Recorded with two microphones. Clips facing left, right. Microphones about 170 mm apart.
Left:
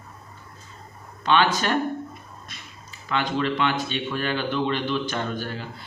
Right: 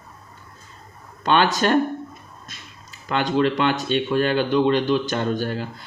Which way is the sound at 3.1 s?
45° right (ahead or behind).